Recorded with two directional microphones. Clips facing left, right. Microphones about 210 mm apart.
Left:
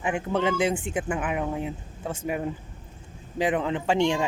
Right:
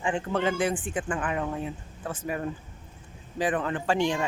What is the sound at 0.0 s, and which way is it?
Speech, 10° left (ahead or behind).